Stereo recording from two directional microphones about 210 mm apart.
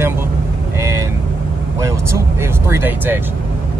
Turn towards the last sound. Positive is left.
turn(degrees=-10)  # may be behind; listen again after turning